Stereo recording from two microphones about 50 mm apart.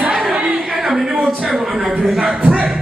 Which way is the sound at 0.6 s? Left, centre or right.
Centre.